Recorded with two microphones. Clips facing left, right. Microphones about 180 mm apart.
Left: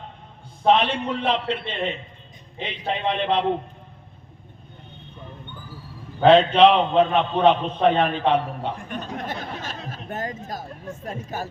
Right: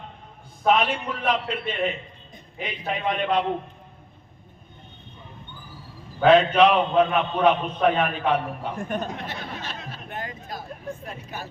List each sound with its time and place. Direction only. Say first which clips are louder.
0.6 s a man's voice: left 2 dB; 30° left (ahead or behind)
6.1 s a man's voice: left 2 dB; 30° left (ahead or behind)
9.0 s speech: left 3 dB; 45° left (ahead or behind)